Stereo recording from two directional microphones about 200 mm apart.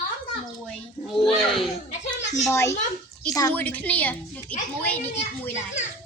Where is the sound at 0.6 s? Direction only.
Centre (ahead or behind).